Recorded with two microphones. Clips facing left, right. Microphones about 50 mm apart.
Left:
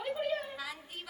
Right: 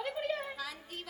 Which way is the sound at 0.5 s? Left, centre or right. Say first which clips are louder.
Even; centre.